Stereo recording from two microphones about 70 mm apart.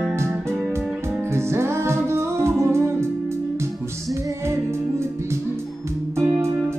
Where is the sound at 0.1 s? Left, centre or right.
Right.